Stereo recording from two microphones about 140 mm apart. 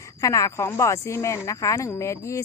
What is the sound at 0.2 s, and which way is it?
A woman's voice, 25° left (ahead or behind).